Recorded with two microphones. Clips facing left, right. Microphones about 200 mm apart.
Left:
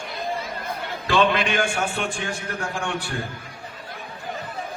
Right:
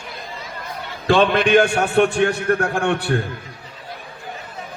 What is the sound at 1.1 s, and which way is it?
A man's voice, 55° right (ahead or behind).